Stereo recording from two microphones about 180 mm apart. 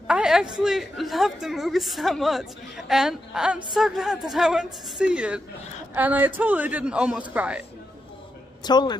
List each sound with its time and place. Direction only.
0.0 s a woman's voice: 5° right (ahead or behind)
8.6 s a man's voice: 25° left (ahead or behind)